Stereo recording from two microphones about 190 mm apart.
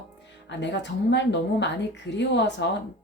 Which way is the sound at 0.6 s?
65° left (ahead or behind).